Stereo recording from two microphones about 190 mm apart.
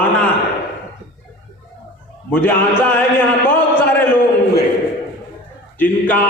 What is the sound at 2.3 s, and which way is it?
Speech, 10° left (ahead or behind).